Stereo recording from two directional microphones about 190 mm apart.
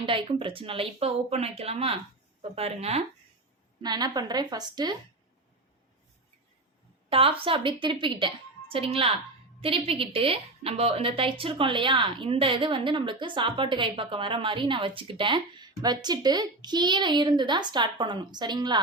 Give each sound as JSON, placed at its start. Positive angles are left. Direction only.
{"t": 0.0, "sound": "a woman's voice", "side_deg": -30}
{"t": 3.8, "sound": "a woman's voice", "side_deg": -20}
{"t": 7.1, "sound": "a woman's voice", "side_deg": -30}